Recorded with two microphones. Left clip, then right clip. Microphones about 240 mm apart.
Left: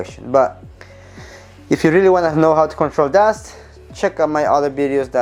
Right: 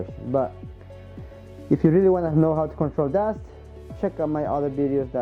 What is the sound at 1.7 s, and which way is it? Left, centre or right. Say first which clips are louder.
Speech: left 7 dB; centre.